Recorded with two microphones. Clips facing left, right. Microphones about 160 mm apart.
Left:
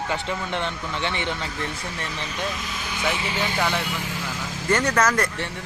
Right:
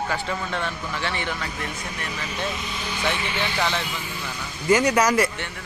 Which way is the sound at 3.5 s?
10° left (ahead or behind).